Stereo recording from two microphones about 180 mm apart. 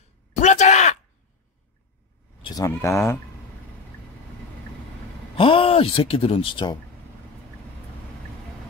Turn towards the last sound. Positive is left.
turn(degrees=25)  # may be behind; listen again after turning